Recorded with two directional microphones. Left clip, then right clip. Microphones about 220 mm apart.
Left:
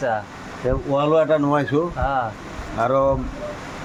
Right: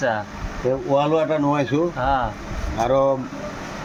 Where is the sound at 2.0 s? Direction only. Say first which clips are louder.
Right 3 dB; 5° right (ahead or behind).